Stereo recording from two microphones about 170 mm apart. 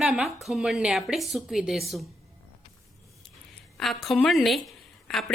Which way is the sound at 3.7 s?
Centre (ahead or behind).